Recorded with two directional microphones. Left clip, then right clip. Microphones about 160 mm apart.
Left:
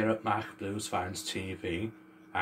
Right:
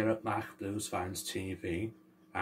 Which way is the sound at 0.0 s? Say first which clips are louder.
Left 3 dB; 20° right (ahead or behind).